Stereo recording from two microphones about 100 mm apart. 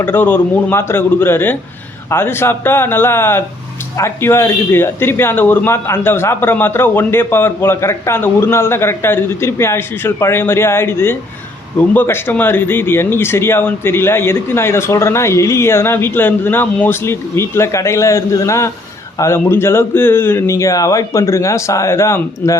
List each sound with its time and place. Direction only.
0.0 s speech: 20° left (ahead or behind)